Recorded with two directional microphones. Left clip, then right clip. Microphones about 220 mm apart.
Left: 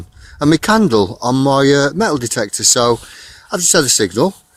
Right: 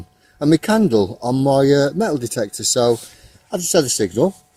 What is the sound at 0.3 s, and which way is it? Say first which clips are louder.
Speech: left 3 dB; 15° left (ahead or behind).